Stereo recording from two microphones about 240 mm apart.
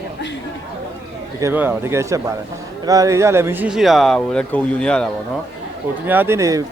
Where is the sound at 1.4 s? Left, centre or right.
Centre.